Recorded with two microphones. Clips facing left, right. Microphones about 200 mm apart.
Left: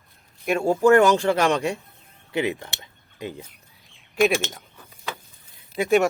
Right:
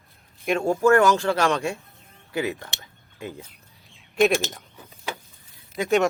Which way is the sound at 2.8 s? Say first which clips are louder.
Left 2 dB; 15° left (ahead or behind).